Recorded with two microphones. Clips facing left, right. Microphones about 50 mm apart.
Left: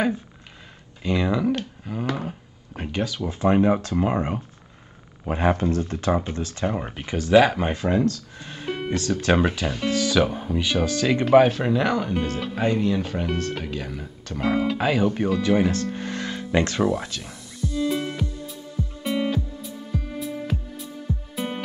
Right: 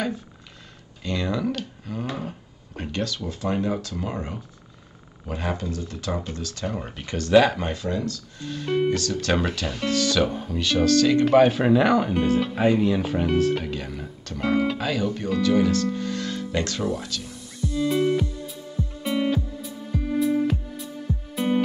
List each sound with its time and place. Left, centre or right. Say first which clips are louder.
1.0 s a sound: left 4 dB; centre
2.2 s speech: left 1 dB; centre
7.7 s speech: left 5 dB; left
8.5 s speech: right 5 dB; centre
11.2 s speech: left 4 dB; centre
14.8 s speech: left 4 dB; centre
17.6 s music: right 2 dB; centre